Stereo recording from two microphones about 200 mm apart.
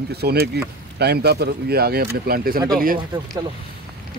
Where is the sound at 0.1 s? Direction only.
55° right (ahead or behind).